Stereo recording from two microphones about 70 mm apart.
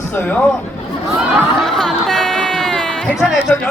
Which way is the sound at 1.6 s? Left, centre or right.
Centre.